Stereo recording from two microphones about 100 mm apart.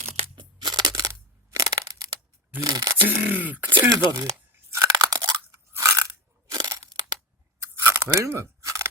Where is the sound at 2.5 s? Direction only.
40° right (ahead or behind).